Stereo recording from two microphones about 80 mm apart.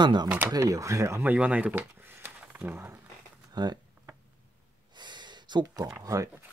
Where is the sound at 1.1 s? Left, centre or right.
Centre.